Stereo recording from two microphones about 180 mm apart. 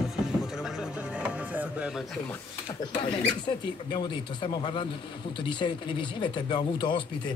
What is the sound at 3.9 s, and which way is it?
Speech, 25° left (ahead or behind).